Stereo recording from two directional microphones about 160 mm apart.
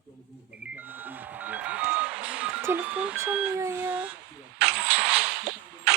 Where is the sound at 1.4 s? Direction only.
10° right (ahead or behind).